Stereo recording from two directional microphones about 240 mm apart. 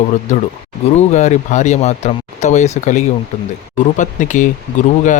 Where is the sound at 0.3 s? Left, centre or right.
Left.